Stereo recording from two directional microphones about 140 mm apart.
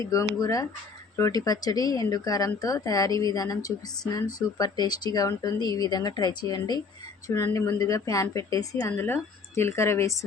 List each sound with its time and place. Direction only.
0.1 s a woman's voice: 25° left (ahead or behind)